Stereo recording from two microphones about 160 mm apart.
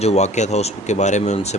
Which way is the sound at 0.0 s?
45° left (ahead or behind).